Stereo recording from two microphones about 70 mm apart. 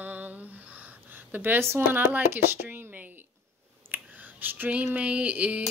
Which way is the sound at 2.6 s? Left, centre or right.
Right.